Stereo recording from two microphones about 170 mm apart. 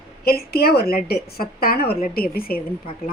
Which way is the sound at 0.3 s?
65° left (ahead or behind).